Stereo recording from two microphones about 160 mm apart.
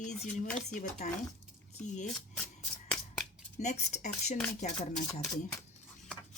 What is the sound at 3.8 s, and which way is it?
Speech, 45° left (ahead or behind).